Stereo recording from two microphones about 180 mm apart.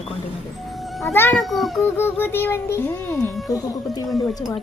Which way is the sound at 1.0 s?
15° left (ahead or behind).